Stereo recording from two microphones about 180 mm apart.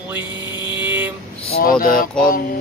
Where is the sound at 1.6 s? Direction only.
50° left (ahead or behind).